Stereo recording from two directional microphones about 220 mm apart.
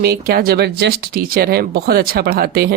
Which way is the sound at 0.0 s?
45° right (ahead or behind).